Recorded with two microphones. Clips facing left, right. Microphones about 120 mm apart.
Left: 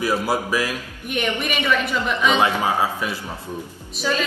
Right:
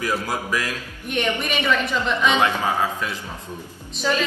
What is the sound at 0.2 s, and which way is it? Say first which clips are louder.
A woman's voice: left 4 dB; 15° left (ahead or behind).